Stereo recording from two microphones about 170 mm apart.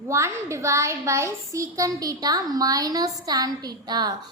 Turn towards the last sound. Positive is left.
turn(degrees=-25)  # may be behind; listen again after turning